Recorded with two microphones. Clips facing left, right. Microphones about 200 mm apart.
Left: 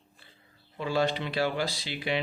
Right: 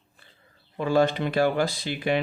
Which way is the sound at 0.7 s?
50° right (ahead or behind).